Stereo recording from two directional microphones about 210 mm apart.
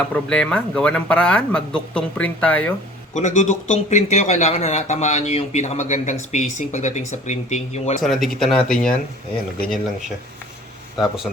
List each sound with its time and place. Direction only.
0.1 s speech: 5° left (ahead or behind)
3.2 s a man's voice: 35° left (ahead or behind)
8.0 s speech: centre (ahead or behind)
10.9 s speech: centre (ahead or behind)